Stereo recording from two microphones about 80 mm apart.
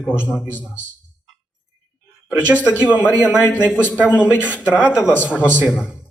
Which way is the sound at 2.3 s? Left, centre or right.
Centre.